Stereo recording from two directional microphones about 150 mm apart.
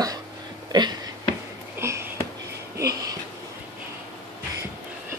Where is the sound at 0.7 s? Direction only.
25° right (ahead or behind).